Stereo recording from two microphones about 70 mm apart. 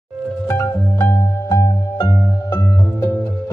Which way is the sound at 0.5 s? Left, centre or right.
Left.